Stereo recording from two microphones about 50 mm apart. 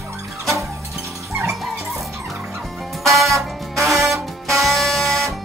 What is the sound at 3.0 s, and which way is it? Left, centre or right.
Music, centre.